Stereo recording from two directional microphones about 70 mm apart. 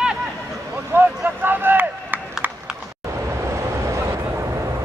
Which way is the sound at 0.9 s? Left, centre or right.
Right.